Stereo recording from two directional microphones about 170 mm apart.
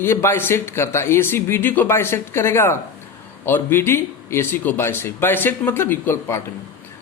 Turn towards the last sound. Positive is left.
turn(degrees=15)  # may be behind; listen again after turning